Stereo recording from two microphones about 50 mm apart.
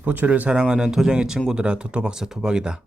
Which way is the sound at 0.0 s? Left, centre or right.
Right.